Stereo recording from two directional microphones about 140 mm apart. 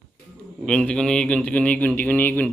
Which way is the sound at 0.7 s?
5° left (ahead or behind).